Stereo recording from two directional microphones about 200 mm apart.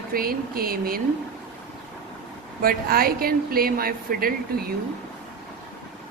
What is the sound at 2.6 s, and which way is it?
A woman's voice, 45° right (ahead or behind).